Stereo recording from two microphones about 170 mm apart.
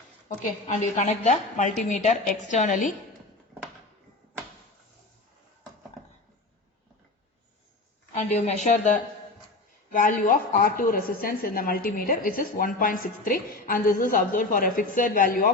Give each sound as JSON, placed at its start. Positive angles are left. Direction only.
{"t": 0.7, "sound": "a woman's voice", "side_deg": 45}
{"t": 8.1, "sound": "a woman's voice", "side_deg": 45}